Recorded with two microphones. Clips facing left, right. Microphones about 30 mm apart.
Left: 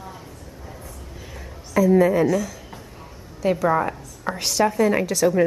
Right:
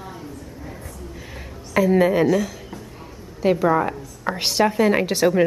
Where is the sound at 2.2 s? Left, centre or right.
Centre.